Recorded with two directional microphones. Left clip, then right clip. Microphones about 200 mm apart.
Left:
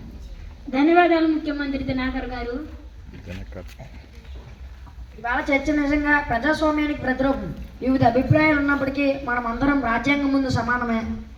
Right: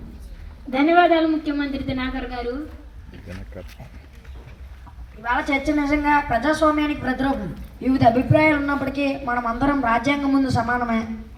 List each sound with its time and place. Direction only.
0.8 s a man's voice: 45° right (ahead or behind)
3.2 s speech: 5° left (ahead or behind)
5.2 s a woman's voice: 55° right (ahead or behind)